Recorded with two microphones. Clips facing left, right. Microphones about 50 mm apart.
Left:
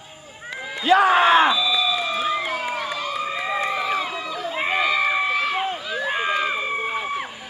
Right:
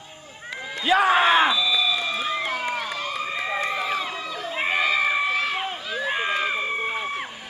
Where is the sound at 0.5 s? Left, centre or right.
Centre.